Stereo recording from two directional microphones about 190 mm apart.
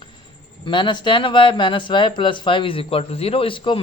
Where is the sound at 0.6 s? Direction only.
25° left (ahead or behind).